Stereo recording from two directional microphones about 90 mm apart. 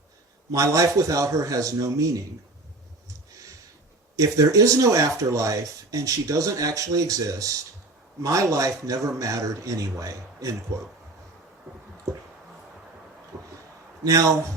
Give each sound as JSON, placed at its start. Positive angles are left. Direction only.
{"t": 0.5, "sound": "speech", "side_deg": -40}
{"t": 4.2, "sound": "a man's voice", "side_deg": -40}
{"t": 14.0, "sound": "speech", "side_deg": -40}